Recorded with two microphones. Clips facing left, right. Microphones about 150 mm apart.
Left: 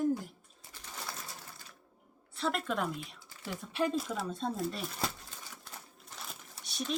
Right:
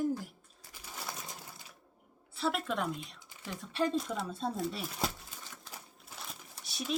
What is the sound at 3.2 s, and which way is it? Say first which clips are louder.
Typing: left 1 dB; 20° right (ahead or behind).